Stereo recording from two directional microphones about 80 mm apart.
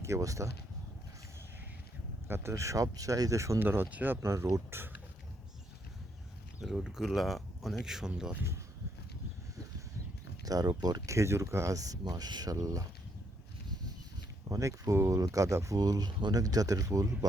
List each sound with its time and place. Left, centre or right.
0.0 s speech: right
2.2 s speech: right
3.6 s speech: right
6.6 s speech: centre
10.4 s speech: right
11.1 s speech: right
14.5 s speech: right